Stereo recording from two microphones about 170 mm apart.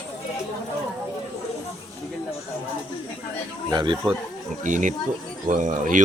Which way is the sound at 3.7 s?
25° right (ahead or behind).